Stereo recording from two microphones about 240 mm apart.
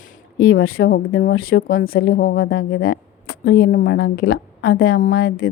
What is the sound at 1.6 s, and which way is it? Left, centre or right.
Speech, left.